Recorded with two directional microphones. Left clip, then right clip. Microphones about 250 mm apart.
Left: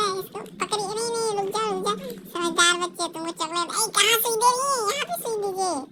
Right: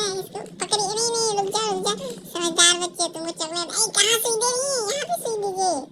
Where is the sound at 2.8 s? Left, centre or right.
Left.